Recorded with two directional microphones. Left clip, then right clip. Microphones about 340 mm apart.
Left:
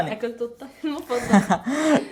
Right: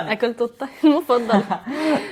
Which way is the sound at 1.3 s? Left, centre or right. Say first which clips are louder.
Even; left.